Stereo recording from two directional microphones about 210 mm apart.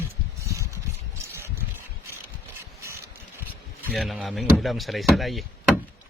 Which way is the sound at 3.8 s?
Centre (ahead or behind).